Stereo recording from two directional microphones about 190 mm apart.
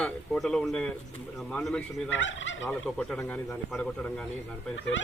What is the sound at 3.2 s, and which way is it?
Speech, 15° left (ahead or behind).